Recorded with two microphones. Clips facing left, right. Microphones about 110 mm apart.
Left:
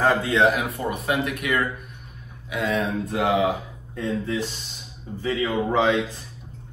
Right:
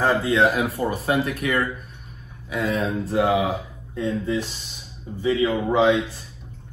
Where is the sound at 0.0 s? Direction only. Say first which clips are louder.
Even; 20° right (ahead or behind).